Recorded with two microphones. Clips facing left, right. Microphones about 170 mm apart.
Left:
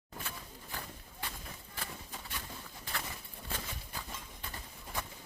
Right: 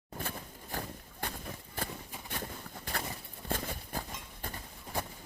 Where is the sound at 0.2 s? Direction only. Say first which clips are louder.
Right 5 dB; 55° right (ahead or behind).